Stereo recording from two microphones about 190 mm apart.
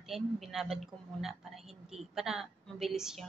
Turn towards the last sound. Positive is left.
turn(degrees=0)  # may be behind; listen again after turning